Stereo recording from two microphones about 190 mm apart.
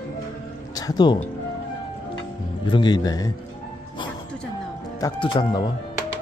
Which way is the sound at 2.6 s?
25° left (ahead or behind).